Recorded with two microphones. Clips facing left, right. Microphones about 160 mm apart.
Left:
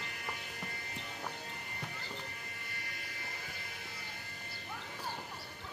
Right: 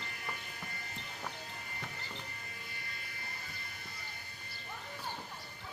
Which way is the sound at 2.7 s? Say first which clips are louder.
Left 1 dB; 75° left (ahead or behind).